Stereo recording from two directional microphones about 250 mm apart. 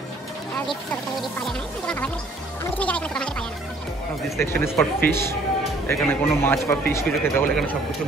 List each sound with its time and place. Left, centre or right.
1.4 s a man's voice: centre